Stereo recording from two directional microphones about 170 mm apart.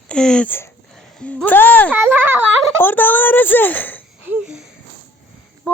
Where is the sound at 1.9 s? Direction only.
10° right (ahead or behind).